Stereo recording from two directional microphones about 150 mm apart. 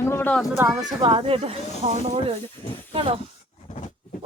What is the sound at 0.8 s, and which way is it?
Speech, 30° right (ahead or behind).